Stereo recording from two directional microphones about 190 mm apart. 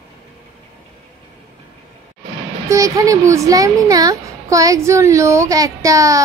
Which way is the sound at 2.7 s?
15° right (ahead or behind).